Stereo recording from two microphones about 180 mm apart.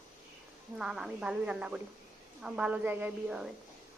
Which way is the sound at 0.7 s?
5° right (ahead or behind).